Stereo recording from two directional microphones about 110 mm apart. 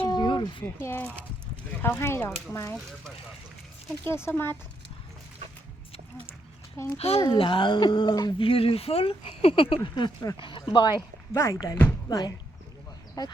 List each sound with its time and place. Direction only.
0.1 s a sound: 40° left (ahead or behind)
0.6 s speech: 20° left (ahead or behind)
4.0 s speech: 20° left (ahead or behind)
6.7 s a child's voice: 15° left (ahead or behind)
7.0 s speech: 65° left (ahead or behind)
7.3 s speech: 50° left (ahead or behind)
8.4 s speech: 55° left (ahead or behind)
11.3 s speech: 25° left (ahead or behind)